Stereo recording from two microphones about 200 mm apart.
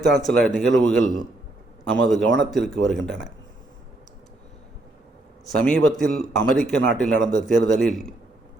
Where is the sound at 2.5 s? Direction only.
Centre (ahead or behind).